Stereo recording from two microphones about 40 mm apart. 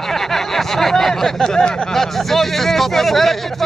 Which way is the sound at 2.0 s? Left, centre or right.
Centre.